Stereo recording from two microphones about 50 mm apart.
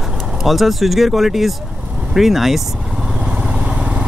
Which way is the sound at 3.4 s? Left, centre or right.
Centre.